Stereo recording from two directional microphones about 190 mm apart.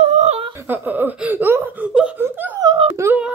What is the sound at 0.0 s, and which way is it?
Laughter, 35° right (ahead or behind).